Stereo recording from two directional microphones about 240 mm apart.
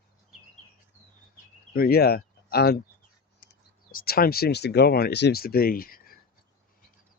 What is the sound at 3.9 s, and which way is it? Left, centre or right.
Speech, left.